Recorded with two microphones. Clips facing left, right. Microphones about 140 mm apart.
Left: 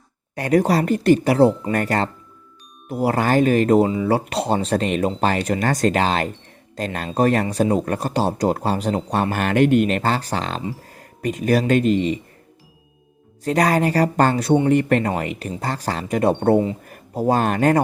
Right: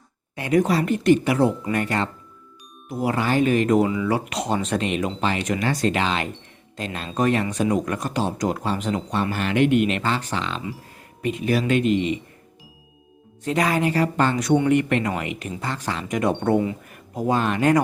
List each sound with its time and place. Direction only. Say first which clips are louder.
0.3 s speech: left 2 dB; 40° left (ahead or behind)
13.4 s speech: left 3 dB; 40° left (ahead or behind)